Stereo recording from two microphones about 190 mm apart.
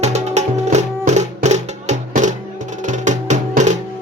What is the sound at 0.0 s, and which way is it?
Music, 35° right (ahead or behind).